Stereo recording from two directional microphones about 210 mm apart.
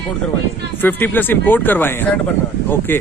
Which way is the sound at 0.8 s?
10° left (ahead or behind).